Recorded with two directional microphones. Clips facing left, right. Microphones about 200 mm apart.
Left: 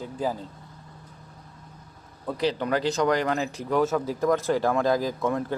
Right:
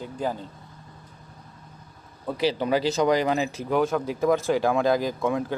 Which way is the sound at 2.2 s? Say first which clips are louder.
Right 1 dB; 5° right (ahead or behind).